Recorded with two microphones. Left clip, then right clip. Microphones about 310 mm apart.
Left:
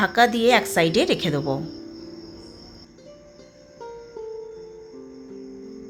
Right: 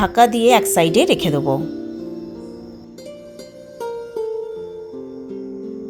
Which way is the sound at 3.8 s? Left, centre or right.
Right.